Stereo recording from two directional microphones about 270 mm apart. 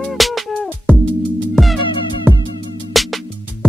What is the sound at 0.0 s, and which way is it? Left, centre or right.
Music, centre.